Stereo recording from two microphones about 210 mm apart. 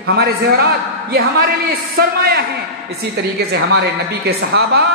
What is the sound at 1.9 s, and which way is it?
Speech, 50° right (ahead or behind).